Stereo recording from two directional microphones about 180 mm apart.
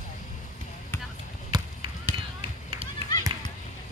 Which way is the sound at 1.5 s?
25° right (ahead or behind).